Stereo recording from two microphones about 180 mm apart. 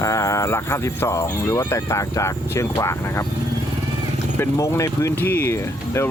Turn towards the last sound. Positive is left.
turn(degrees=15)  # may be behind; listen again after turning